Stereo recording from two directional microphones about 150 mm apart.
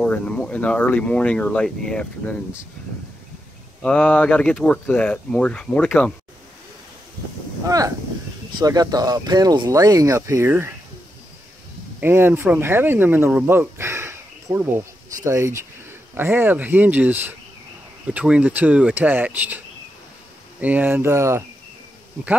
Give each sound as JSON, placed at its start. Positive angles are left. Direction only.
{"t": 0.0, "sound": "speech", "side_deg": 10}
{"t": 3.8, "sound": "speech", "side_deg": 5}
{"t": 7.6, "sound": "speech", "side_deg": -20}
{"t": 12.0, "sound": "speech", "side_deg": -15}
{"t": 20.6, "sound": "speech", "side_deg": -10}